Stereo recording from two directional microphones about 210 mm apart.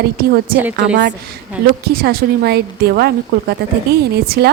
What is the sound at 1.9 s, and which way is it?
A woman's voice, 50° right (ahead or behind).